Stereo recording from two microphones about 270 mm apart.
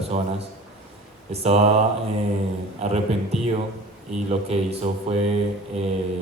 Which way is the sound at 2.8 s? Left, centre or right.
Right.